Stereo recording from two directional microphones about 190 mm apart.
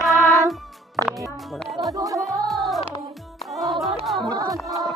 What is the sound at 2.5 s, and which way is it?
Music, centre (ahead or behind).